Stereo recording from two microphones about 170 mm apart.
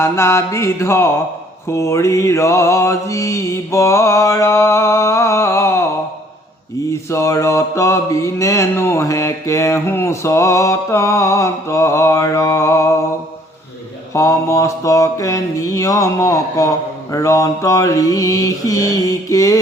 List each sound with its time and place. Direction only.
0.0 s mantra: 15° left (ahead or behind)
6.9 s mantra: 15° left (ahead or behind)
14.1 s mantra: 20° left (ahead or behind)